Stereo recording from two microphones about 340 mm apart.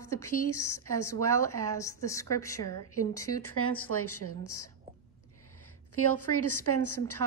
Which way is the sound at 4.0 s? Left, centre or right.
Left.